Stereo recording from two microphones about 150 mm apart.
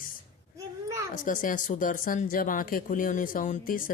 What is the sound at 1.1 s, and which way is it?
Speech, 65° left (ahead or behind).